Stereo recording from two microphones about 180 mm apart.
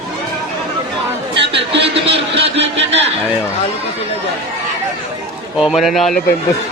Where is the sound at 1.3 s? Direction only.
30° right (ahead or behind).